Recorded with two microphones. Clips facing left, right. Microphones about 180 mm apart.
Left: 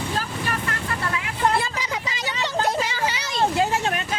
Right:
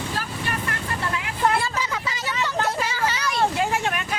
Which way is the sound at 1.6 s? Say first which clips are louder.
Right 1 dB; 15° left (ahead or behind).